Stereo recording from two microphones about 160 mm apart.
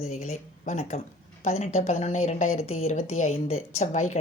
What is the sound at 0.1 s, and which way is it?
Speech, 50° left (ahead or behind).